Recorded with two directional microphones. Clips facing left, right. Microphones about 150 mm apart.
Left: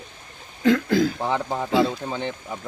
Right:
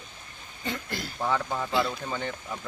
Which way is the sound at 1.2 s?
25° left (ahead or behind).